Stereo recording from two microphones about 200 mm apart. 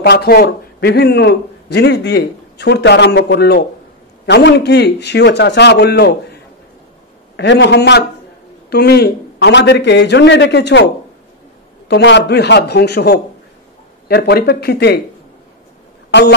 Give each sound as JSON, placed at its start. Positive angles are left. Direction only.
{"t": 0.0, "sound": "a man's voice", "side_deg": 50}
{"t": 7.3, "sound": "a man's voice", "side_deg": 60}
{"t": 11.9, "sound": "a man's voice", "side_deg": 60}
{"t": 16.1, "sound": "speech", "side_deg": 60}